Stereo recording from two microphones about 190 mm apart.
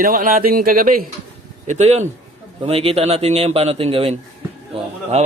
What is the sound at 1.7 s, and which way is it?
A man's voice, 35° right (ahead or behind).